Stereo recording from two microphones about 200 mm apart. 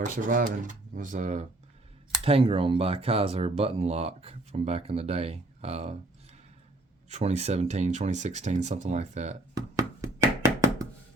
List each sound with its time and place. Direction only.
0.0 s speech: 40° right (ahead or behind)
7.1 s speech: 35° right (ahead or behind)
9.6 s knock: 15° right (ahead or behind)